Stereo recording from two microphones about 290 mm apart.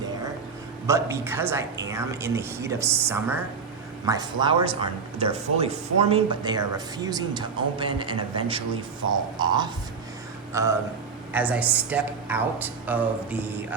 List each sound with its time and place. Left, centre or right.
0.9 s speech: centre